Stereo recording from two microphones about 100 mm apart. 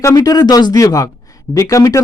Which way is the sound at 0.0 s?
35° left (ahead or behind).